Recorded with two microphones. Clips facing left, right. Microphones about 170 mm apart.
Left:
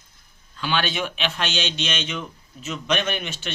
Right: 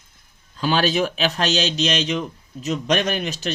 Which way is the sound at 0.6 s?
40° right (ahead or behind).